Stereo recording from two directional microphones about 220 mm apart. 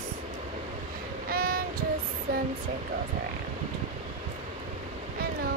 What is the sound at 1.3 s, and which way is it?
Child singing, 40° right (ahead or behind).